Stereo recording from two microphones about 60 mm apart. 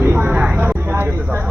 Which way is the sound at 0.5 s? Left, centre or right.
Right.